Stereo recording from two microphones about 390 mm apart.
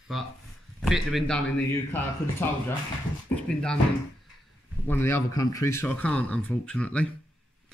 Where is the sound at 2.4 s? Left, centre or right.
Centre.